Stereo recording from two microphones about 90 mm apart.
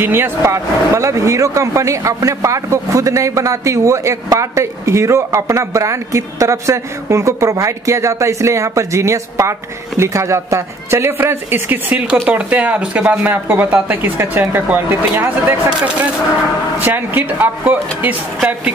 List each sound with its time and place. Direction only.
0.0 s a woman's voice: 25° right (ahead or behind)
16.7 s a woman's voice: 20° right (ahead or behind)